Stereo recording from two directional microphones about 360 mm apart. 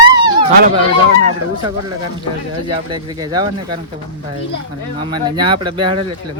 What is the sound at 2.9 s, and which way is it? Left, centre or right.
Speech, centre.